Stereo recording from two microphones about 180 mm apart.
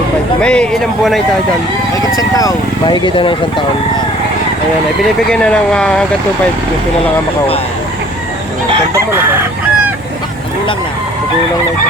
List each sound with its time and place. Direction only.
0.4 s speech: 5° left (ahead or behind)
2.1 s speech: 20° left (ahead or behind)
5.3 s speech: 5° left (ahead or behind)
8.9 s chicken: 15° right (ahead or behind)